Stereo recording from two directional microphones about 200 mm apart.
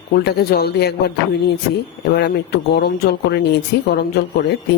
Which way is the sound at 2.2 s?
50° left (ahead or behind).